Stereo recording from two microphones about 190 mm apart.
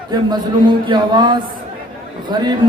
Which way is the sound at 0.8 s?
25° right (ahead or behind).